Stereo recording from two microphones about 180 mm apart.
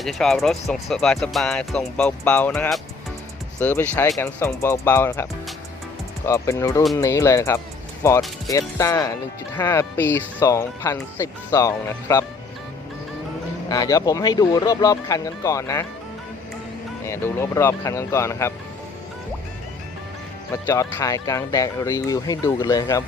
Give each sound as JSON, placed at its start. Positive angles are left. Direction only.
{"t": 0.0, "sound": "speech", "side_deg": 0}
{"t": 13.7, "sound": "speech", "side_deg": 20}
{"t": 17.1, "sound": "speech", "side_deg": 15}
{"t": 20.5, "sound": "speech", "side_deg": 15}